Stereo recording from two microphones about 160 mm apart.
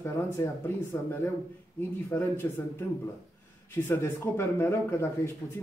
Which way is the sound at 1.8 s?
15° left (ahead or behind).